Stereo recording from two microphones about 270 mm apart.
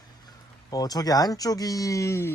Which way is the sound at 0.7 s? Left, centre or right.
Centre.